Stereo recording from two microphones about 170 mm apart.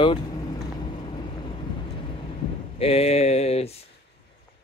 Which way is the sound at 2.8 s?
35° left (ahead or behind).